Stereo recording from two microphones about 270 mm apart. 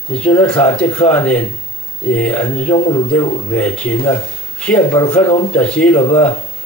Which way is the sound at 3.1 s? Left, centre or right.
Centre.